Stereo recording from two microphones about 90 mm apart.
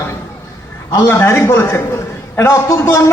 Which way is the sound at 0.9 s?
30° left (ahead or behind).